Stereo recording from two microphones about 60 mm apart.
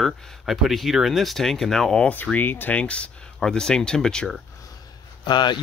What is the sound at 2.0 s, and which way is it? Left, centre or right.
Speech, centre.